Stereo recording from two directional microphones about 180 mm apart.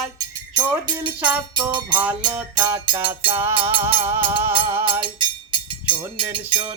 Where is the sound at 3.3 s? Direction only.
15° right (ahead or behind).